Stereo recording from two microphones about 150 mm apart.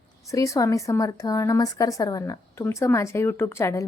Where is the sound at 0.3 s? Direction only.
20° left (ahead or behind).